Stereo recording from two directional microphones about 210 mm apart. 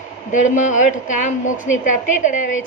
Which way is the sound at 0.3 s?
35° left (ahead or behind).